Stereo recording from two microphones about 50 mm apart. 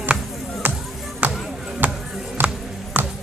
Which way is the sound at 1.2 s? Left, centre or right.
Right.